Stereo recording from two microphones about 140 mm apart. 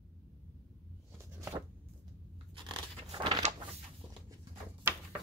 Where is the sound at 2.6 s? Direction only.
30° right (ahead or behind).